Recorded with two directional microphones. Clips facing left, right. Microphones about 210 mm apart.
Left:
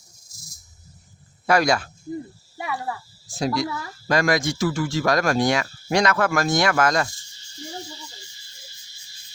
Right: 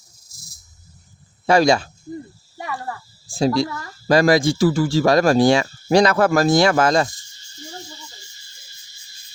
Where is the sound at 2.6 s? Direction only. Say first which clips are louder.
Even; 5° left (ahead or behind).